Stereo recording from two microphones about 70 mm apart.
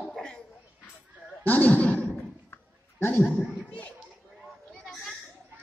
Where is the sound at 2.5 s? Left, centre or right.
Left.